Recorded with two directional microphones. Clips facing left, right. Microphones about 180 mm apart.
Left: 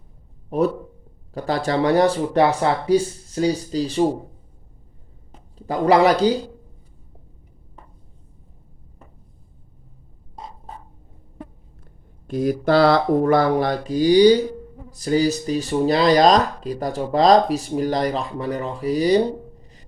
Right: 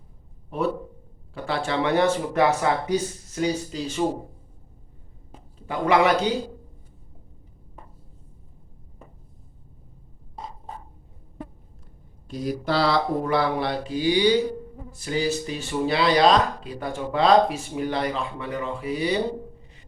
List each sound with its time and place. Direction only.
0.5 s speech: 40° left (ahead or behind)
5.5 s a man's voice: 35° left (ahead or behind)
12.3 s speech: 50° left (ahead or behind)